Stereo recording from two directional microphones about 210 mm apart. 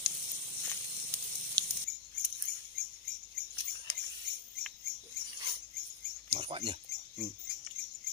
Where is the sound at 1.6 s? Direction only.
25° right (ahead or behind).